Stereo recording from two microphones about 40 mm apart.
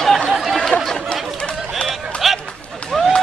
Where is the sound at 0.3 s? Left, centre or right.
Centre.